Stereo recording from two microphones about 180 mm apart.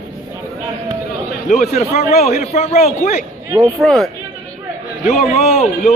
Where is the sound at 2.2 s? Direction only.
35° left (ahead or behind).